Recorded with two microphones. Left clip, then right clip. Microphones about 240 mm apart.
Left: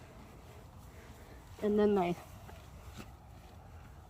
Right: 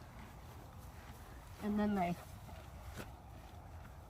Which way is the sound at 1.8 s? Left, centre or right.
Centre.